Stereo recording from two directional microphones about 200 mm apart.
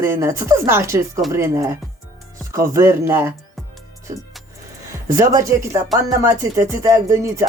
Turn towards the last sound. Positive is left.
turn(degrees=-15)  # may be behind; listen again after turning